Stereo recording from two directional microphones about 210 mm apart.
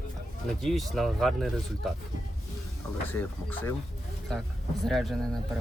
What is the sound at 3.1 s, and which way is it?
Speech, 10° left (ahead or behind).